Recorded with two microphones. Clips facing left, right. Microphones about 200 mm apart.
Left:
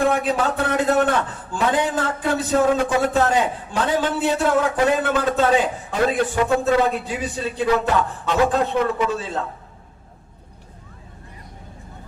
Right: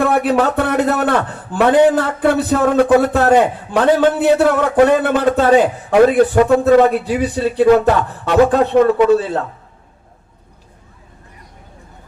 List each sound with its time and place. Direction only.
0.0 s a man's voice: 65° right (ahead or behind)